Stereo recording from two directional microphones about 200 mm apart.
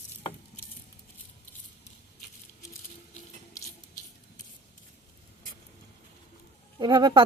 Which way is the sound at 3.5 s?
15° left (ahead or behind).